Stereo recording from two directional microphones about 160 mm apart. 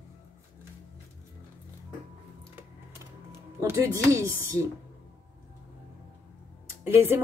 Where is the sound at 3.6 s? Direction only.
20° right (ahead or behind).